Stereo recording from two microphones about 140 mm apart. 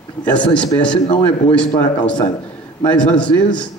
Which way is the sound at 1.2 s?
10° left (ahead or behind).